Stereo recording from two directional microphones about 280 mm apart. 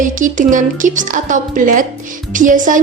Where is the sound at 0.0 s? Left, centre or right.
Right.